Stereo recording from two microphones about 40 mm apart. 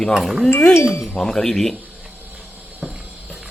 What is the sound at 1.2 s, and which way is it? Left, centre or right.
Speech, centre.